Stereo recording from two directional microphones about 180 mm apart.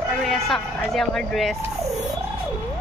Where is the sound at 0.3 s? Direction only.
Centre (ahead or behind).